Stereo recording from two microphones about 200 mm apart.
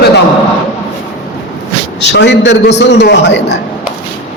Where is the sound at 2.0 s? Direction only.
60° left (ahead or behind).